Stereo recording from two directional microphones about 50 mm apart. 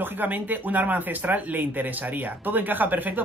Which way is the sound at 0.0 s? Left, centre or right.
Right.